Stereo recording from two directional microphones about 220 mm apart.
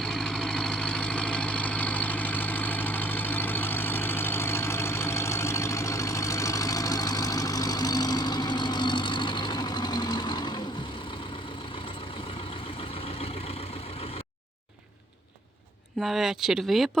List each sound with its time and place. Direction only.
0.0 s vehicle: centre (ahead or behind); by 10.6 s 20° left (ahead or behind)
13.1 s vehicle: 25° left (ahead or behind)
16.0 s speech: centre (ahead or behind)